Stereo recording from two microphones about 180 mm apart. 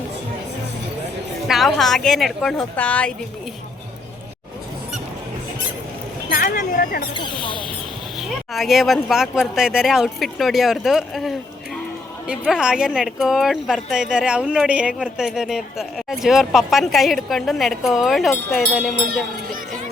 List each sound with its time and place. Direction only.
1.5 s speech: centre (ahead or behind)
6.3 s speech: 50° left (ahead or behind)
7.1 s speech: 25° left (ahead or behind)
8.5 s speech: centre (ahead or behind)